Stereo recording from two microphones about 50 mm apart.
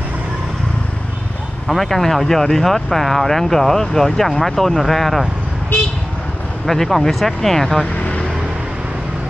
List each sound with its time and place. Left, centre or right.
1.7 s speech: centre
6.6 s speech: centre
7.8 s vehicle: left